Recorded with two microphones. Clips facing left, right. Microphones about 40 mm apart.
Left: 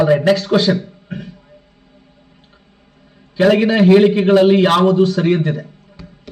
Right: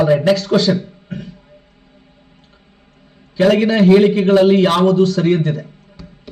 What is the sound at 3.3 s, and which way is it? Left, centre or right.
A man's voice, centre.